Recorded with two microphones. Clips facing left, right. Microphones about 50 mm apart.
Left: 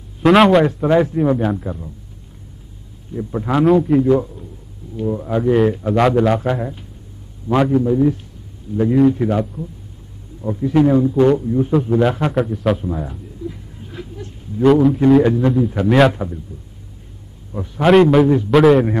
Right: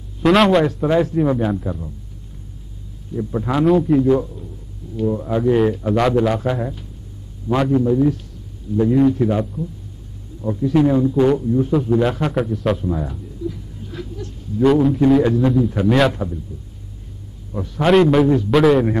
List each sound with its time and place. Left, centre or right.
0.2 s a man's voice: centre
3.2 s a man's voice: centre
10.4 s speech: left
10.8 s a man's voice: centre
11.4 s a man's voice: centre
11.9 s a man's voice: centre
13.5 s a sound: left
14.6 s a man's voice: centre
16.1 s speech: centre
17.5 s a man's voice: centre